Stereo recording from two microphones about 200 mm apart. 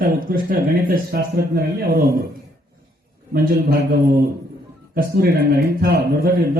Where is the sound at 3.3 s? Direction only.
45° right (ahead or behind).